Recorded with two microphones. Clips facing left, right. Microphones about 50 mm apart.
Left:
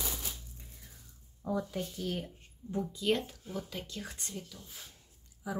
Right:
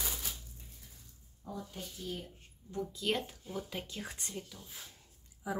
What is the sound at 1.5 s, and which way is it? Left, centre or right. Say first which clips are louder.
Speech: left 8 dB; left.